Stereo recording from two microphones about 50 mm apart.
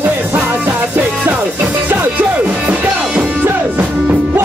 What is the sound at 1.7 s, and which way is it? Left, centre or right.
Music, right.